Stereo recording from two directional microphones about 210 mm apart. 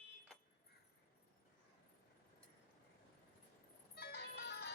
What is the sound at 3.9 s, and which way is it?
Ice cream truck, 50° left (ahead or behind).